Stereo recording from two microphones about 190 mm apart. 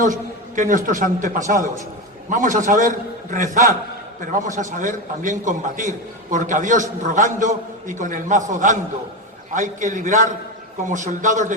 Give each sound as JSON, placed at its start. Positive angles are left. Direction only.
{"t": 0.5, "sound": "a man's voice", "side_deg": -45}